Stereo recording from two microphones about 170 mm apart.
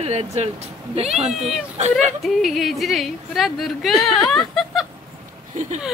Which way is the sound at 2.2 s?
Centre (ahead or behind).